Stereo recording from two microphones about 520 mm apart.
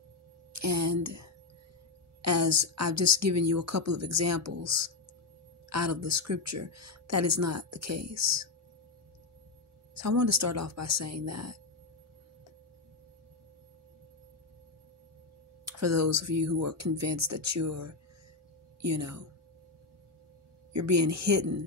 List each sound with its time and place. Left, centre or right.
0.5 s speech: right
9.9 s speech: right
15.6 s speech: right
20.7 s speech: right